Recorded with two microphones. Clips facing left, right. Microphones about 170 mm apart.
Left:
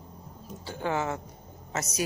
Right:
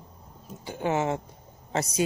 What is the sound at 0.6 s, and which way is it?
A woman's voice, 20° right (ahead or behind).